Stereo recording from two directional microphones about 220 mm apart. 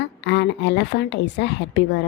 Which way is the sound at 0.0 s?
50° left (ahead or behind).